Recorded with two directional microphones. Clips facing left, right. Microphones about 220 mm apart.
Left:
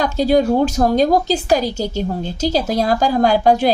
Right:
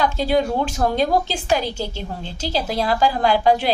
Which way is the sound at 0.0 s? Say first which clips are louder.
Left 4 dB; 40° left (ahead or behind).